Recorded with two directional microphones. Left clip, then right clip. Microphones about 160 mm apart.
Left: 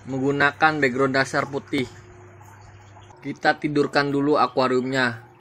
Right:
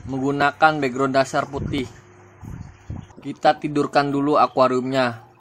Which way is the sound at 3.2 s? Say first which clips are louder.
Right 3 dB; 25° right (ahead or behind).